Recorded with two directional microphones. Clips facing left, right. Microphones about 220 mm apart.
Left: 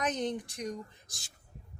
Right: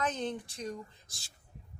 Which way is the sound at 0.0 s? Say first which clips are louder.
Left 2 dB; 15° left (ahead or behind).